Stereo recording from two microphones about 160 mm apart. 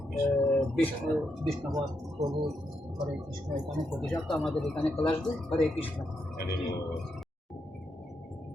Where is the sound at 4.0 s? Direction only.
5° left (ahead or behind).